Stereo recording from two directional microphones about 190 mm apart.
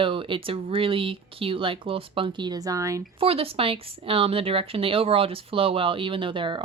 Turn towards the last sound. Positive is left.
turn(degrees=-25)  # may be behind; listen again after turning